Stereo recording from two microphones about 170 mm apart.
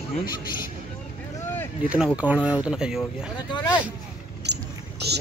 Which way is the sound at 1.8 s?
5° right (ahead or behind).